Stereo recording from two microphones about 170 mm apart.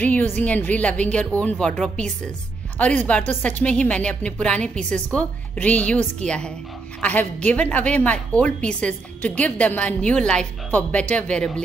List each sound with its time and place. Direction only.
0.0 s a woman's voice: 10° left (ahead or behind)